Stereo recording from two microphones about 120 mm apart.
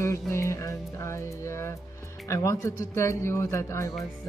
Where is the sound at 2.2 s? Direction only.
25° left (ahead or behind).